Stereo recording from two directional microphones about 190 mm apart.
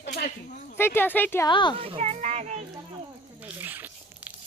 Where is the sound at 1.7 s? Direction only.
30° right (ahead or behind).